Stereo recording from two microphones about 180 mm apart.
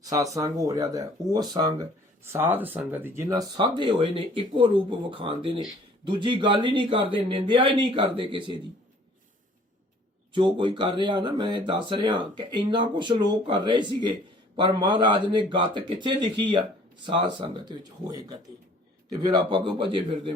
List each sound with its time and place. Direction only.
0.0 s a man's voice: 20° right (ahead or behind)
10.3 s a man's voice: 25° right (ahead or behind)